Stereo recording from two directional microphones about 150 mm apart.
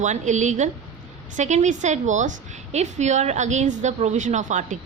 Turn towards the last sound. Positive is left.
turn(degrees=-55)  # may be behind; listen again after turning